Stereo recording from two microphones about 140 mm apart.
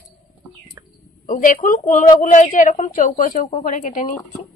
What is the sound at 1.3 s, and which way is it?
A woman's voice, 70° left (ahead or behind).